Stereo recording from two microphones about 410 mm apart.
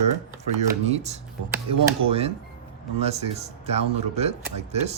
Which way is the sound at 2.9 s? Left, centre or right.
Centre.